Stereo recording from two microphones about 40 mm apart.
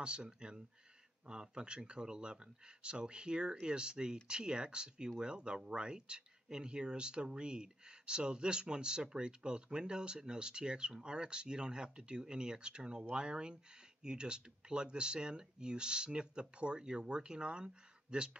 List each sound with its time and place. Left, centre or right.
0.0 s speech: right